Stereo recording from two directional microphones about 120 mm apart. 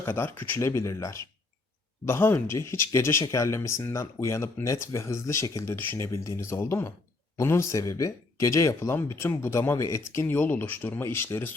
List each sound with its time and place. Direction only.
0.0 s speech: 20° left (ahead or behind)